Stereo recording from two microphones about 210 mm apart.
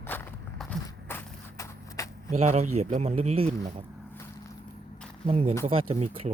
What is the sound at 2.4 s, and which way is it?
Speech, 30° right (ahead or behind).